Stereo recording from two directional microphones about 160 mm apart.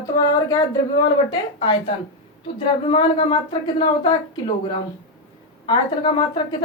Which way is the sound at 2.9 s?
35° left (ahead or behind).